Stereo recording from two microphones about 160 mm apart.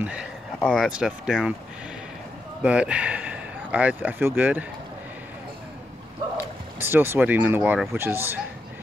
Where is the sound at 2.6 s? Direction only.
5° right (ahead or behind).